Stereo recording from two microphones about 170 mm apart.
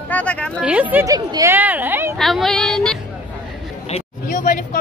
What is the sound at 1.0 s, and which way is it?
Speech, 20° right (ahead or behind).